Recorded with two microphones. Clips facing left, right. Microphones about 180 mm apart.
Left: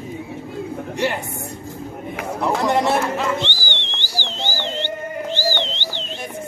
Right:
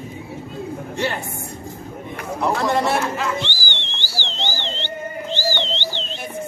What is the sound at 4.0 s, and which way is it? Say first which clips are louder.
Music: even; 15° left (ahead or behind).